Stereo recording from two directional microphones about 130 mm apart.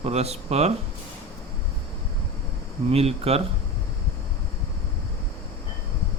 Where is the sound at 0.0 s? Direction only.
55° right (ahead or behind).